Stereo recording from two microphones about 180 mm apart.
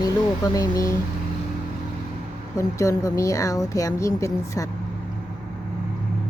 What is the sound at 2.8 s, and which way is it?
A woman's voice, 15° left (ahead or behind).